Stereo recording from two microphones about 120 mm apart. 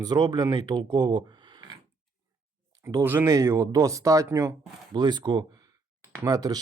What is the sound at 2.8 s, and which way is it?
Speech, 20° right (ahead or behind).